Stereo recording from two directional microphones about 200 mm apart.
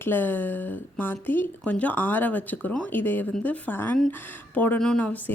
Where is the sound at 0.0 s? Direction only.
10° left (ahead or behind).